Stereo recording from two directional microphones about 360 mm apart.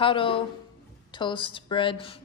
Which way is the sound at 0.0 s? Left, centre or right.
Centre.